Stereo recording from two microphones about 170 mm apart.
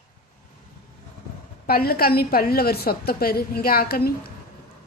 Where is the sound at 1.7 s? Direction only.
65° left (ahead or behind).